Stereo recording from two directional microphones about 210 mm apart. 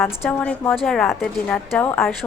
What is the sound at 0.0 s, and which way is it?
A woman's voice, 5° left (ahead or behind).